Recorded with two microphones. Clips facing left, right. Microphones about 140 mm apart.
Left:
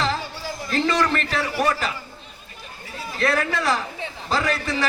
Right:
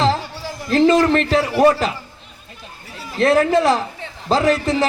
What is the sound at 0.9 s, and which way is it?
A man's voice, 30° right (ahead or behind).